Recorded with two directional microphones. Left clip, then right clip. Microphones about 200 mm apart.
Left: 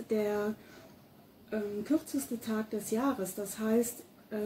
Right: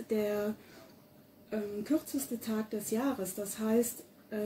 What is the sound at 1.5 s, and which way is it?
Speech, centre (ahead or behind).